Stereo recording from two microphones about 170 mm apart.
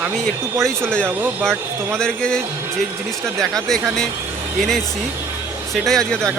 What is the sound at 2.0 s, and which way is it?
Speech, 5° left (ahead or behind).